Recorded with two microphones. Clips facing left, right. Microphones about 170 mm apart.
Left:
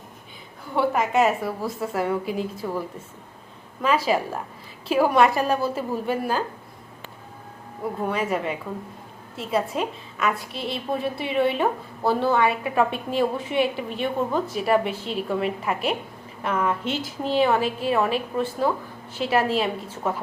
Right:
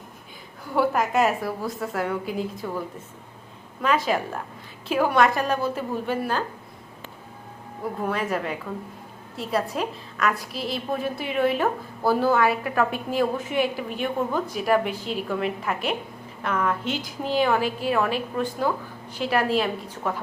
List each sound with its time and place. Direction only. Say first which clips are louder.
0.8 s a woman's voice: left 1 dB; centre (ahead or behind)
8.0 s a woman's voice: left 1 dB; centre (ahead or behind)